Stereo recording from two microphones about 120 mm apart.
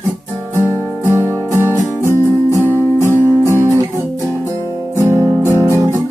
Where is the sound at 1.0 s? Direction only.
20° right (ahead or behind).